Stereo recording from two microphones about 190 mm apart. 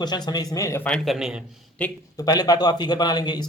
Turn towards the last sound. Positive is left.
turn(degrees=20)  # may be behind; listen again after turning